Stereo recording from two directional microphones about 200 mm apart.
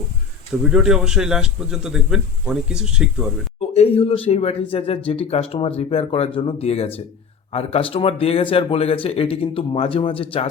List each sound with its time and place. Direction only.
0.6 s a man's voice: 5° right (ahead or behind)
3.8 s a man's voice: 30° left (ahead or behind)